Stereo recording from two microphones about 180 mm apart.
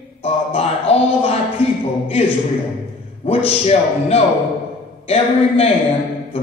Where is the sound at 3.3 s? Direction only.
35° left (ahead or behind).